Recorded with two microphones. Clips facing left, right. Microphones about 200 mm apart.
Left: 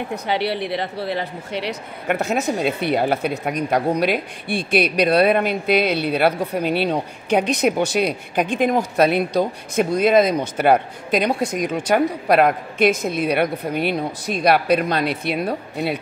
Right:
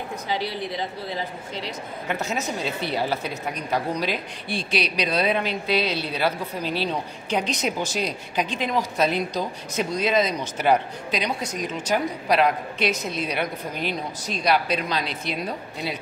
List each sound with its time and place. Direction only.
0.1 s speech: 70° left (ahead or behind)